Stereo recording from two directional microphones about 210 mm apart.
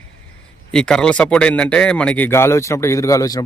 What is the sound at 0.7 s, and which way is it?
Speech, 5° left (ahead or behind).